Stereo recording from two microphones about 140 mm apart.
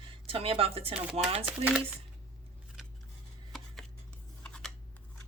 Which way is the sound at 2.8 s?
Centre (ahead or behind).